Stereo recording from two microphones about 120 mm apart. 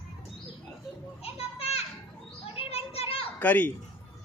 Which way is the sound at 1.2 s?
60° left (ahead or behind).